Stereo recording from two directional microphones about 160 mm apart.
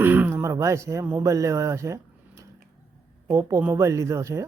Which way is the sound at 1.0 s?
15° right (ahead or behind).